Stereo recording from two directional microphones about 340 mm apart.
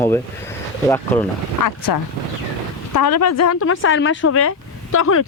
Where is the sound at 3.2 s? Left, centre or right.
Left.